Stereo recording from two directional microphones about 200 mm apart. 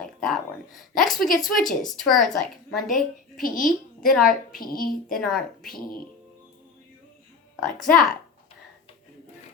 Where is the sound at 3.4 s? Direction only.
45° left (ahead or behind).